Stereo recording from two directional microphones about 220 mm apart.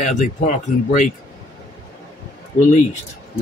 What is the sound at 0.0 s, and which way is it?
Speech, 35° left (ahead or behind).